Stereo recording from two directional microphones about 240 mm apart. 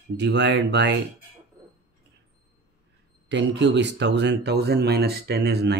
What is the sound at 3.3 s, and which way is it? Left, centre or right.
Speech, right.